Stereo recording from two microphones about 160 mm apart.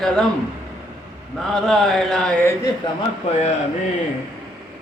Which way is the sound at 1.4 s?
5° left (ahead or behind).